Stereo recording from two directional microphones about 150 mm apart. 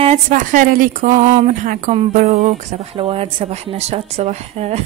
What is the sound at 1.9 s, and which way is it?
Speech, 50° right (ahead or behind).